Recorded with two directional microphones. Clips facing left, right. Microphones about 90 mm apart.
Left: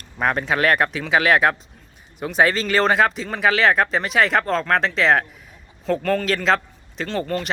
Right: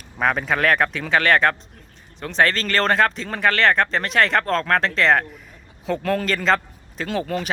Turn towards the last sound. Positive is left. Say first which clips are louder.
# even
turn(degrees=-5)  # may be behind; listen again after turning